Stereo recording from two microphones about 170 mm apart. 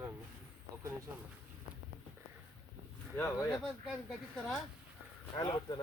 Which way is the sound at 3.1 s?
15° left (ahead or behind).